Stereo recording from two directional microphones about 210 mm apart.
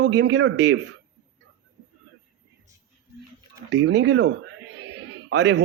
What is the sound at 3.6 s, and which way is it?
A man's voice, 55° right (ahead or behind).